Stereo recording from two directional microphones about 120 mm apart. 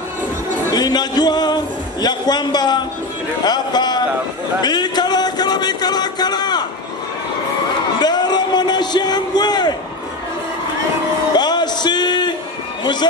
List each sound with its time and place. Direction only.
0.7 s a man's voice: 35° left (ahead or behind)
4.6 s a sound: 35° left (ahead or behind)
8.0 s a man's voice: 35° left (ahead or behind)
11.3 s a man's voice: 35° left (ahead or behind)